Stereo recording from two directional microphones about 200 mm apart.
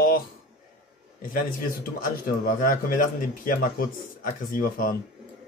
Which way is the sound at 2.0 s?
45° left (ahead or behind).